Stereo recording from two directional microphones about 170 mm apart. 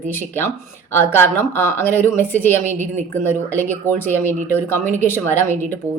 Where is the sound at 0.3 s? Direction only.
15° left (ahead or behind).